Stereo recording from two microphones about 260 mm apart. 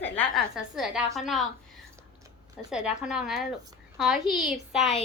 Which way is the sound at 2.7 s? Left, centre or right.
Centre.